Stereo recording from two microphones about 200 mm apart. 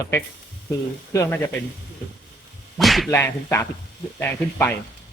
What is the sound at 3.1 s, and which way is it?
Speech, 10° left (ahead or behind).